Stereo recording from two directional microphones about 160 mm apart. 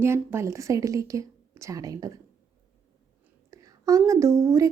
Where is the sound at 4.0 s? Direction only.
20° right (ahead or behind).